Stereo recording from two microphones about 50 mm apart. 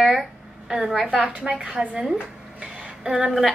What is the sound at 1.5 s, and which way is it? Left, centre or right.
Speech, centre.